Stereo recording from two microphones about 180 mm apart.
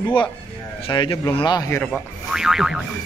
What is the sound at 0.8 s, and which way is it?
Speech, 30° left (ahead or behind).